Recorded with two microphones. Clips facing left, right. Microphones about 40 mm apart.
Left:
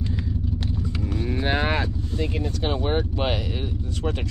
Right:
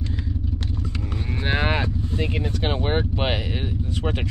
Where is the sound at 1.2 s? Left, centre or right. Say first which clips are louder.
Even; centre.